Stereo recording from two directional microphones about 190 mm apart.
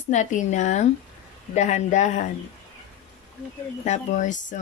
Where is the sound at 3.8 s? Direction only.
40° left (ahead or behind).